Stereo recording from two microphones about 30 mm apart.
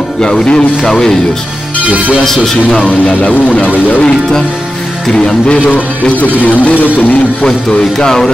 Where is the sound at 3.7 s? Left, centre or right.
Left.